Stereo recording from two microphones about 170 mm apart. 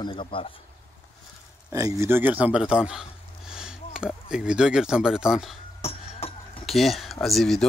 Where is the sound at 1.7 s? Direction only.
20° right (ahead or behind); by 5.6 s 5° right (ahead or behind).